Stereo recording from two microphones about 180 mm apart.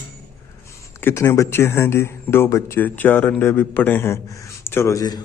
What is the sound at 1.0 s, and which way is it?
Speech, 15° left (ahead or behind).